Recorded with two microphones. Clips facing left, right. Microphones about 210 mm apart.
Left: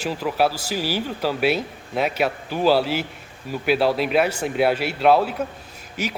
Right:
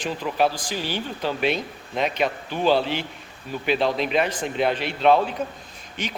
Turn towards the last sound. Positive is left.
turn(degrees=10)  # may be behind; listen again after turning